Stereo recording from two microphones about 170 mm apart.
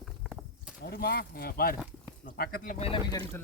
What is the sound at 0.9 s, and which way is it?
Speech, 70° left (ahead or behind).